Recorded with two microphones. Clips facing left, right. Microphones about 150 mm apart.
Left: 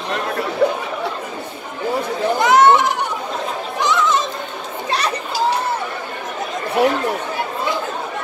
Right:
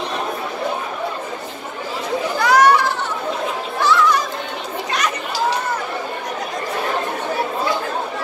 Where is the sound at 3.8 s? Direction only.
20° left (ahead or behind).